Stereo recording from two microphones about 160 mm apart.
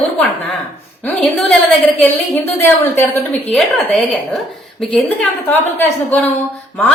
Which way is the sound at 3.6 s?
Centre (ahead or behind).